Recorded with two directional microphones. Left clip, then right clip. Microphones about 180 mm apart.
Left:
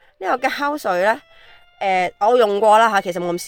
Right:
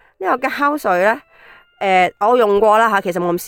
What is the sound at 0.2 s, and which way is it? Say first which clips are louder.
Speech: right 3 dB; 30° right (ahead or behind).